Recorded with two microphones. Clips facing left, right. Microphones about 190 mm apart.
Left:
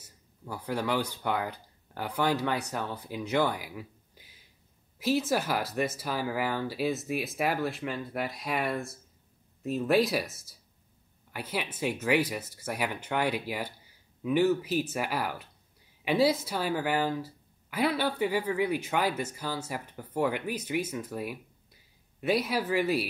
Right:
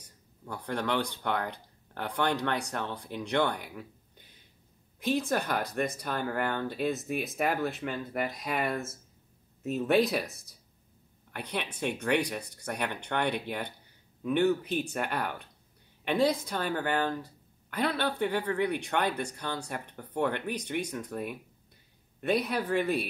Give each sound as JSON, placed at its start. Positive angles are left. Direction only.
{"t": 0.0, "sound": "speech", "side_deg": 5}